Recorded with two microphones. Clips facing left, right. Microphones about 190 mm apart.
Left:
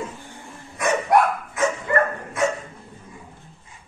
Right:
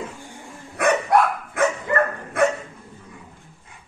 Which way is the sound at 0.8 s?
60° right (ahead or behind).